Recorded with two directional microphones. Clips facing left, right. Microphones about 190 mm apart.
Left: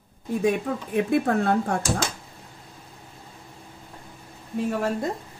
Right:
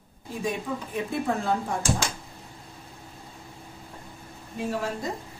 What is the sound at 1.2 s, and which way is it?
Speech, 65° left (ahead or behind).